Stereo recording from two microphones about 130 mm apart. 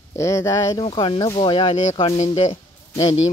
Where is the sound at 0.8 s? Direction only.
40° left (ahead or behind).